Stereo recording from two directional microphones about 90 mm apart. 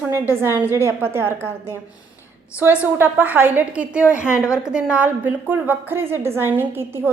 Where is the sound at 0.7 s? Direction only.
35° left (ahead or behind).